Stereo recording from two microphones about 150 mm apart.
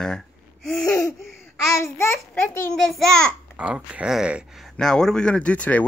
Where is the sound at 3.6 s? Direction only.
10° right (ahead or behind).